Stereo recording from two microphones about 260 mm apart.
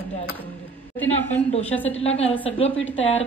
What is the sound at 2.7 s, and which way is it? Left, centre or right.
Speech, left.